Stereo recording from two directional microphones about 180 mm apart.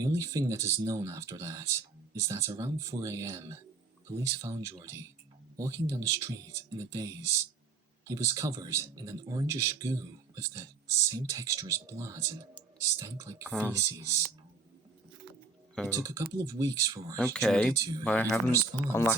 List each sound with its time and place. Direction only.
0.0 s speech: 20° right (ahead or behind)
13.5 s speech: 5° left (ahead or behind)
13.7 s speech: 15° right (ahead or behind)
15.9 s speech: 15° right (ahead or behind)
17.3 s speech: 5° left (ahead or behind)
17.7 s speech: 20° right (ahead or behind)
18.0 s speech: 10° left (ahead or behind)